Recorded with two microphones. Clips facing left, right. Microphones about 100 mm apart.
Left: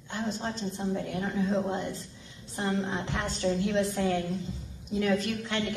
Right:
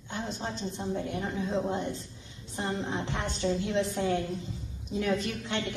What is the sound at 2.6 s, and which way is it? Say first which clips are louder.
A woman's voice: left 2 dB; 25° right (ahead or behind).